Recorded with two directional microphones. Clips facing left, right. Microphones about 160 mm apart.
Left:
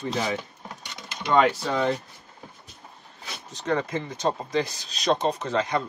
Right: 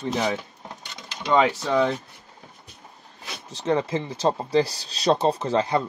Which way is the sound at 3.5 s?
25° right (ahead or behind).